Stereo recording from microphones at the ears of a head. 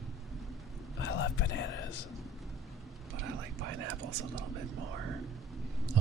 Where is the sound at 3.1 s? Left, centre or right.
Right.